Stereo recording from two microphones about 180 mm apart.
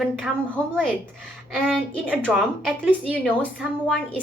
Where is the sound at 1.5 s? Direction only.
5° right (ahead or behind).